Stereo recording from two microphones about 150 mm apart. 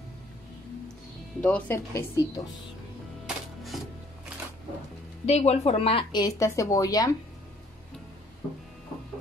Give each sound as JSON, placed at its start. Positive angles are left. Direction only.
{"t": 1.4, "sound": "speech", "side_deg": 10}
{"t": 2.0, "sound": "a woman's voice", "side_deg": 20}
{"t": 3.3, "sound": "music", "side_deg": 0}
{"t": 5.2, "sound": "a woman's voice", "side_deg": 45}
{"t": 6.2, "sound": "a woman's voice", "side_deg": 20}